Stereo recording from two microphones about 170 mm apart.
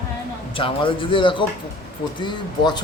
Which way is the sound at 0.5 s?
30° left (ahead or behind).